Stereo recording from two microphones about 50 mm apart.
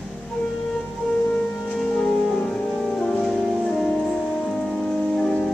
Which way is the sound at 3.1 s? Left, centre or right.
Centre.